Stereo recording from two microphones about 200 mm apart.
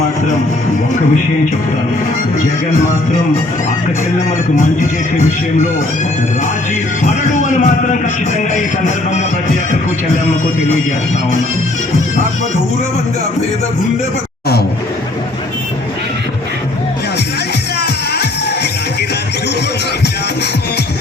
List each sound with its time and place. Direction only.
7.0 s speech: 40° left (ahead or behind)
17.7 s music: 55° left (ahead or behind)